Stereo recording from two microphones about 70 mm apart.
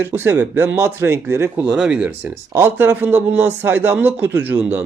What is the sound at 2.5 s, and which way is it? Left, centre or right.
Speech, right.